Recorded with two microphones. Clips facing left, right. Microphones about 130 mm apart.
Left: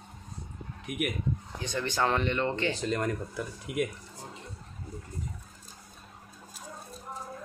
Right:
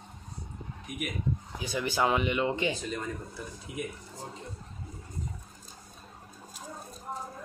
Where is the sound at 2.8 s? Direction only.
80° left.